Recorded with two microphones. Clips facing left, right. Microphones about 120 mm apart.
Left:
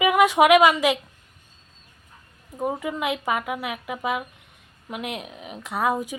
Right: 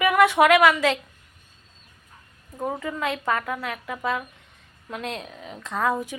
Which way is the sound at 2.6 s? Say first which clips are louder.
Left 2 dB; 15° left (ahead or behind).